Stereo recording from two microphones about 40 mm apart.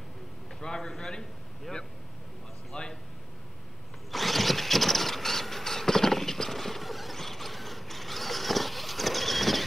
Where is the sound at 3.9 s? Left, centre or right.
Centre.